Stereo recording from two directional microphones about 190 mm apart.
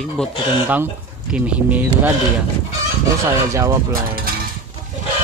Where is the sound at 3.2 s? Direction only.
15° right (ahead or behind).